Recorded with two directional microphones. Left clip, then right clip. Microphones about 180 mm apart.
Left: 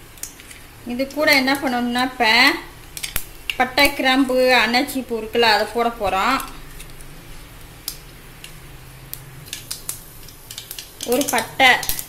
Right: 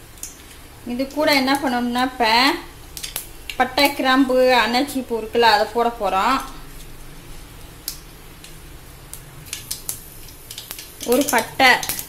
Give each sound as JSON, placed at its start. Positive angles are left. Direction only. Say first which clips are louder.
{"t": 0.8, "sound": "a woman's voice", "louder": "left 1 dB", "side_deg": 0}
{"t": 11.2, "sound": "speech", "louder": "left 1 dB", "side_deg": -15}